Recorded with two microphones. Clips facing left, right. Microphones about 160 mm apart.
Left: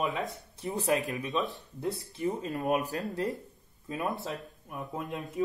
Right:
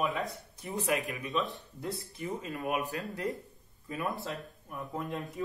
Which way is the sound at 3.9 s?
20° left (ahead or behind).